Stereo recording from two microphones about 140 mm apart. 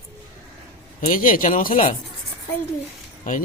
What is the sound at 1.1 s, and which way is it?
Speech, 80° left.